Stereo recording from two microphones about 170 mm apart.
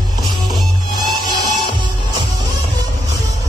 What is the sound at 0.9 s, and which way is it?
Music, 25° right (ahead or behind).